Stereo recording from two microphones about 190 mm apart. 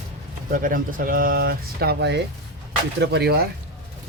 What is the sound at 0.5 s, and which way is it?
Speech, 45° right (ahead or behind).